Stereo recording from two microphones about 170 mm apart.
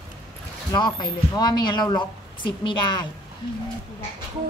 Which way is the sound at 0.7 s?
25° left (ahead or behind).